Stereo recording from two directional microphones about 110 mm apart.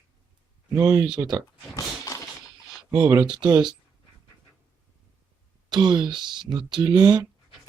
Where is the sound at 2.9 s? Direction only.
35° right (ahead or behind).